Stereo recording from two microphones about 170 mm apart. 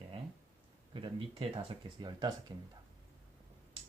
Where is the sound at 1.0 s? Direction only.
30° right (ahead or behind).